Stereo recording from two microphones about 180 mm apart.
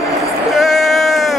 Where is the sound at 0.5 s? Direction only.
Centre (ahead or behind).